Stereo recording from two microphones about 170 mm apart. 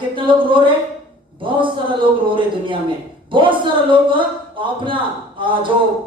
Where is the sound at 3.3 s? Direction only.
30° right (ahead or behind).